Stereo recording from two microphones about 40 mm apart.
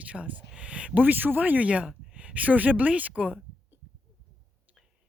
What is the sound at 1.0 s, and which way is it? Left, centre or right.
Speech, right.